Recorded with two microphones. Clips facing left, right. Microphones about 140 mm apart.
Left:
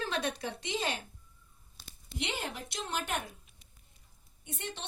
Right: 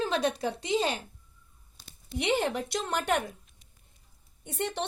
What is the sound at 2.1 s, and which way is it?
A woman's voice, 60° right (ahead or behind).